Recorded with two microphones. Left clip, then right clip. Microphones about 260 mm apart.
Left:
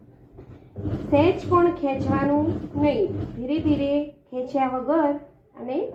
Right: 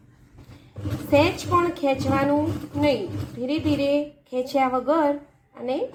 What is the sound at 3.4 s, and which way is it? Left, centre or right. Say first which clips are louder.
A woman's voice: even; right.